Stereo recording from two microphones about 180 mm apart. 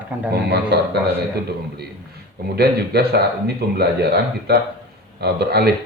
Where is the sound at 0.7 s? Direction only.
65° right (ahead or behind).